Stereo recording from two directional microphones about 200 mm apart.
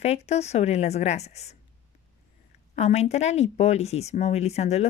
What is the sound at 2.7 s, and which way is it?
Speech, 35° left (ahead or behind).